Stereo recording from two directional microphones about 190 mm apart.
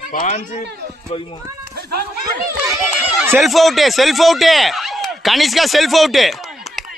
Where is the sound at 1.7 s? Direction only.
55° right (ahead or behind).